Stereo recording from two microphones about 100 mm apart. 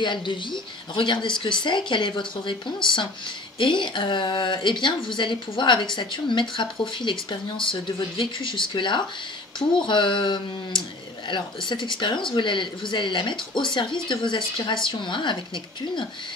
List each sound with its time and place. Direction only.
0.0 s speech: 50° left (ahead or behind)